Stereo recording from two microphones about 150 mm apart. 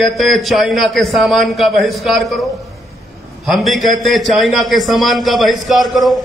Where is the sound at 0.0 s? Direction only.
Centre (ahead or behind).